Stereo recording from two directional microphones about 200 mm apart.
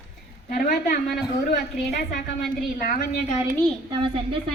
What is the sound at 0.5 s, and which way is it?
Speech, 45° left (ahead or behind).